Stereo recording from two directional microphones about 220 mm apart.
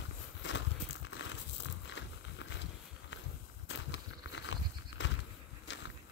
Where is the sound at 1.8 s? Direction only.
55° left (ahead or behind).